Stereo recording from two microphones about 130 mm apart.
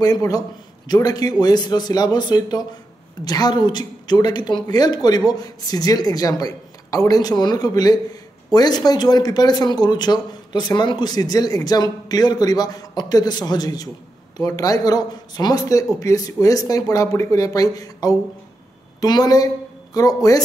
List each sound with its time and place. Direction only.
0.0 s a woman's voice: 30° left (ahead or behind)